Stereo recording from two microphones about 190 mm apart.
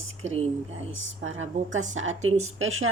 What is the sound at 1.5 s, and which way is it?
Speech, 40° right (ahead or behind).